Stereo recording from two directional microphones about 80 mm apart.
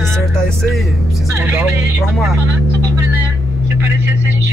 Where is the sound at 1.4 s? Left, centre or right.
Right.